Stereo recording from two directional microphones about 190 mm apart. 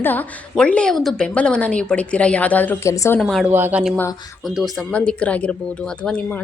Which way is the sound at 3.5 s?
10° right (ahead or behind).